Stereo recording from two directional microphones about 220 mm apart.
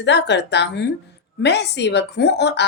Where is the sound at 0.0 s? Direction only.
50° left (ahead or behind).